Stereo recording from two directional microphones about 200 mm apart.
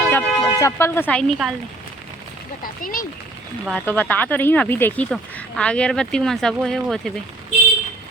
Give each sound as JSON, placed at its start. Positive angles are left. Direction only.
{"t": 0.1, "sound": "speech", "side_deg": 15}
{"t": 2.8, "sound": "speech", "side_deg": 45}
{"t": 3.7, "sound": "speech", "side_deg": 5}